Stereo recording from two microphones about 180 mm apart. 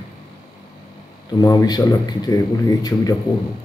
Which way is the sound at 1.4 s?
20° left (ahead or behind).